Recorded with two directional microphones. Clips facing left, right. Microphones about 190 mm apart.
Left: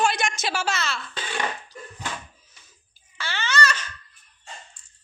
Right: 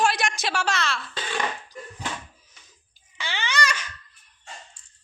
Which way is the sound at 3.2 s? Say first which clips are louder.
Left 2 dB; 15° right (ahead or behind).